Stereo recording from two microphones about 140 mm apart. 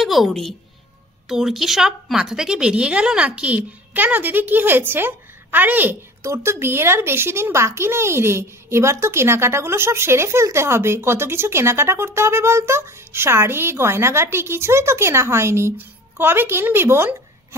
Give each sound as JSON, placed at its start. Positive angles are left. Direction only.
{"t": 0.0, "sound": "a woman's voice", "side_deg": 0}